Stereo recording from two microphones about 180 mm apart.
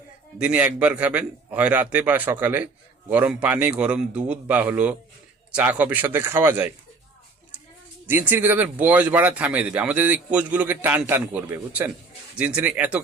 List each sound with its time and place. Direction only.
0.3 s speech: 5° right (ahead or behind)
8.0 s speech: 10° right (ahead or behind)